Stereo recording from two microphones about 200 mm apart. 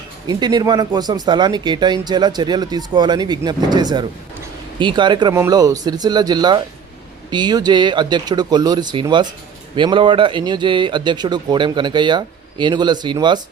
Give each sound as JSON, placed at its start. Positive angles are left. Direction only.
{"t": 0.3, "sound": "speech", "side_deg": -20}